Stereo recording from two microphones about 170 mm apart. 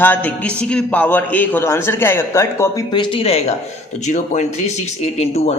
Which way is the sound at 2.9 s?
30° left (ahead or behind).